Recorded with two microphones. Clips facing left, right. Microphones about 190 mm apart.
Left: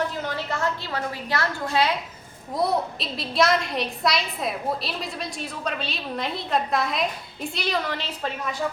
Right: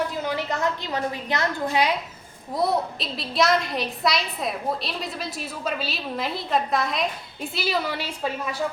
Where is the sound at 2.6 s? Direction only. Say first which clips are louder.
Even; centre (ahead or behind).